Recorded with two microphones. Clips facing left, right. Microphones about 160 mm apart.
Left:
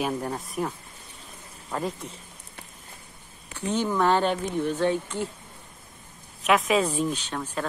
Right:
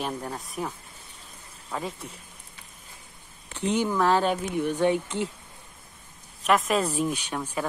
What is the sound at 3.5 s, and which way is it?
Speech, 15° right (ahead or behind).